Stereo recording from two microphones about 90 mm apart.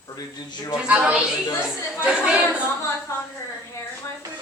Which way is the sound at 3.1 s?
35° left (ahead or behind).